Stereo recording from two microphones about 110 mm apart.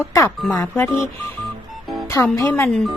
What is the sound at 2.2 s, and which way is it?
Speech, 25° left (ahead or behind).